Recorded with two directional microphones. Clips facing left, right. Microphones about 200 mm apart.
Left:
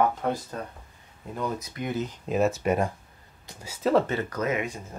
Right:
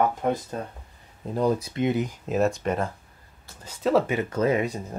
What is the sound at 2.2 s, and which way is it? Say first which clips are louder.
Speech: left 3 dB; centre (ahead or behind).